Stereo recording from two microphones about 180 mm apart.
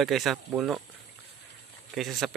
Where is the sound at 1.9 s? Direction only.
Centre (ahead or behind).